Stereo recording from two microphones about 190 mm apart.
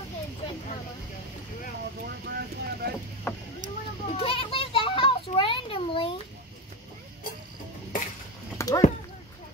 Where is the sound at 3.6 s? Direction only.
40° right (ahead or behind).